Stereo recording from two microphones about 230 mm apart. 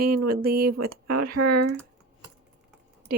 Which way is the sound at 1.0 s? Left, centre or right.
Right.